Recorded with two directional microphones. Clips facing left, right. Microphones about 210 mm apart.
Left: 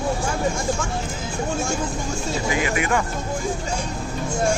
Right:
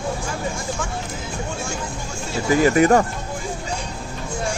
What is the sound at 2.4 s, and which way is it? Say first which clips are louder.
Speech: right 10 dB; 40° right (ahead or behind).